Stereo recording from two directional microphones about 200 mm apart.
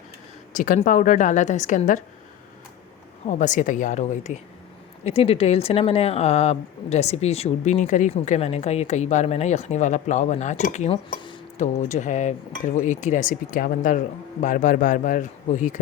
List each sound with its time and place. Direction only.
0.5 s speech: 40° left (ahead or behind)
3.2 s speech: 40° left (ahead or behind)
11.5 s speech: 35° left (ahead or behind)